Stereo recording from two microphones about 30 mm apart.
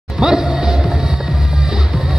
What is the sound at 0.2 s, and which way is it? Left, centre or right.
Music, centre.